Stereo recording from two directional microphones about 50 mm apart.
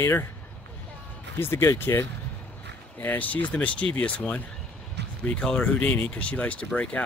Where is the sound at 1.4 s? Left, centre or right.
Left.